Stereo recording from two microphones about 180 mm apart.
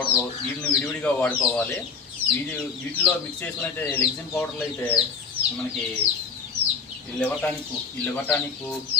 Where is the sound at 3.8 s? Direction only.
10° left (ahead or behind).